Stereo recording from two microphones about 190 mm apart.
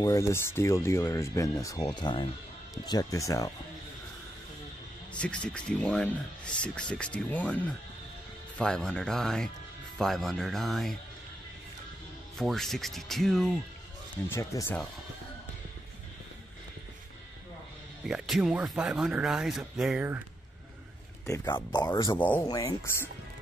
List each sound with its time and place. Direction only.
0.0 s speech: 15° left (ahead or behind)
5.2 s speech: 5° left (ahead or behind)
12.4 s speech: centre (ahead or behind)
14.3 s speech: 15° left (ahead or behind)
18.0 s speech: centre (ahead or behind)
21.3 s speech: 20° left (ahead or behind)
22.5 s speech: 20° left (ahead or behind)